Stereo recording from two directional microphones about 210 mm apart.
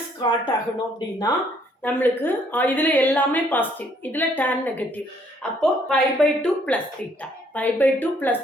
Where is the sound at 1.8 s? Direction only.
10° left (ahead or behind).